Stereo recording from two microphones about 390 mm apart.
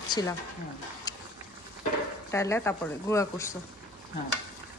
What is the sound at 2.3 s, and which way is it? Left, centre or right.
Speech, centre.